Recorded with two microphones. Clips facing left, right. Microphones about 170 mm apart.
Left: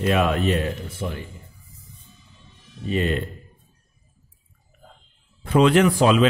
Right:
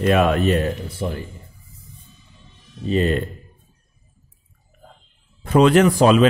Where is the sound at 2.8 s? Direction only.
35° right (ahead or behind).